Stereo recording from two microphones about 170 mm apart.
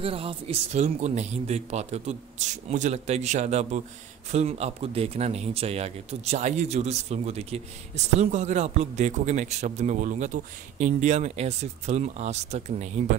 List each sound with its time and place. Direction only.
0.0 s speech: 35° right (ahead or behind)